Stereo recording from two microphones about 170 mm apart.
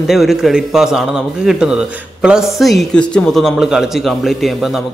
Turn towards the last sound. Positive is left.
turn(degrees=0)  # may be behind; listen again after turning